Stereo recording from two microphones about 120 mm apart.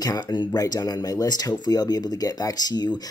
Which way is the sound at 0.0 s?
30° left (ahead or behind).